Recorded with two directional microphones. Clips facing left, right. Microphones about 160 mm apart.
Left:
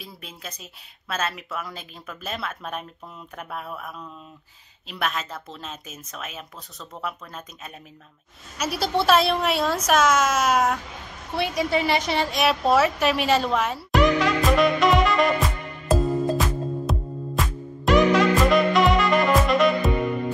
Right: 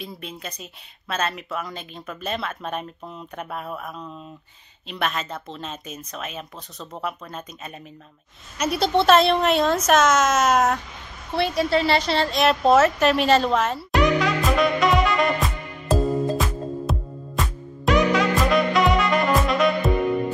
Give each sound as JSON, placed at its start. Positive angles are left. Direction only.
{"t": 0.0, "sound": "speech", "side_deg": 0}
{"t": 13.9, "sound": "music", "side_deg": 0}